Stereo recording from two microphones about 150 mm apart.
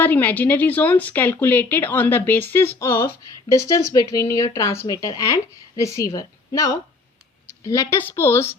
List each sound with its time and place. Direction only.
0.0 s a woman's voice: 10° left (ahead or behind)